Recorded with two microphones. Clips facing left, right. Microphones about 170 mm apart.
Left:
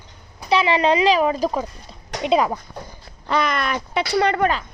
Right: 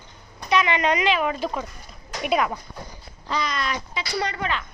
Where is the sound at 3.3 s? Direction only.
60° left (ahead or behind).